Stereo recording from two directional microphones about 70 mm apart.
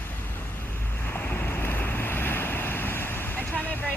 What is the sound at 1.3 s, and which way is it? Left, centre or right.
Waves, left.